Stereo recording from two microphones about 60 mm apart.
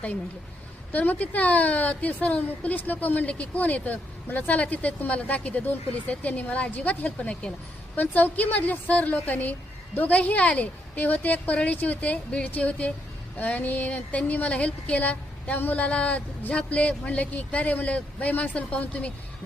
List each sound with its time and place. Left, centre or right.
0.9 s a woman's voice: left